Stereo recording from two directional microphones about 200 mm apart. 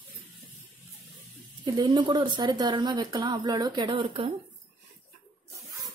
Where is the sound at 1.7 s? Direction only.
20° right (ahead or behind).